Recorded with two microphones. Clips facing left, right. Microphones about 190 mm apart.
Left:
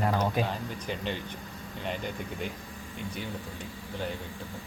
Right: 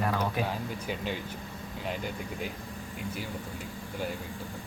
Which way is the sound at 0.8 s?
5° right (ahead or behind).